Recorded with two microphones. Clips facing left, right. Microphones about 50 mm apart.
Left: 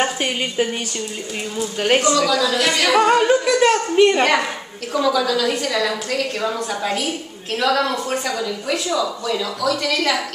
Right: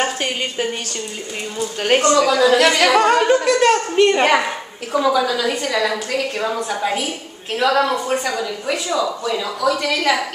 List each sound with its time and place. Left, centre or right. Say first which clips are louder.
0.0 s a woman's voice: even; centre
2.1 s singing: right 4 dB; right
2.9 s a woman's voice: right 1 dB; centre